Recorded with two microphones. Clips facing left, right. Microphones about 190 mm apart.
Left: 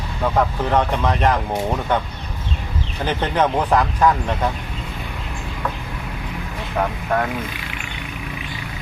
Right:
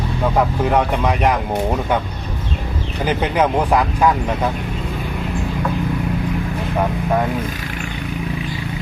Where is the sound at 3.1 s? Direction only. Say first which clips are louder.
Right 2 dB; 10° right (ahead or behind).